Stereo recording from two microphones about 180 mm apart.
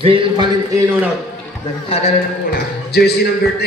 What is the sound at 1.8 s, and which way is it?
Speech, 35° left (ahead or behind).